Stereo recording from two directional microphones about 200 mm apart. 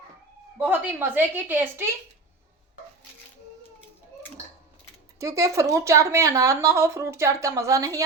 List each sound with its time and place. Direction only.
0.6 s speech: 10° right (ahead or behind)
5.2 s speech: 15° right (ahead or behind)